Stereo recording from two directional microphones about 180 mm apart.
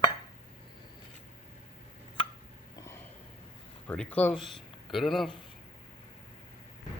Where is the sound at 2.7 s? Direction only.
15° left (ahead or behind).